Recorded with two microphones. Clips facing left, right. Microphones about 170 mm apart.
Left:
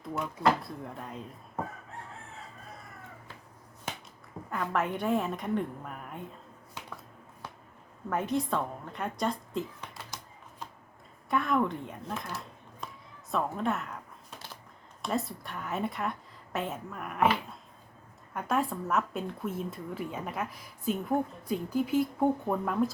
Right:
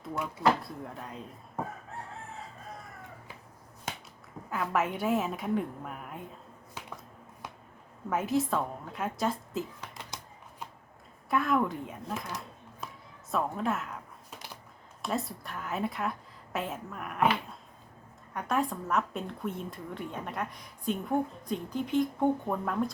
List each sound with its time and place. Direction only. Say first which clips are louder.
0.0 s a woman's voice: even; centre (ahead or behind)
4.4 s a woman's voice: right 1 dB; 5° right (ahead or behind)
8.1 s a woman's voice: right 1 dB; 5° right (ahead or behind)
11.3 s a woman's voice: even; centre (ahead or behind)
12.8 s a sound: even; 5° right (ahead or behind)
13.3 s a woman's voice: even; centre (ahead or behind)
15.0 s a woman's voice: left 1 dB; centre (ahead or behind)
18.3 s a woman's voice: even; centre (ahead or behind)